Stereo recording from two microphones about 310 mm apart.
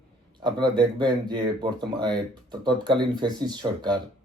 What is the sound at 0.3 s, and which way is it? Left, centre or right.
Speech, centre.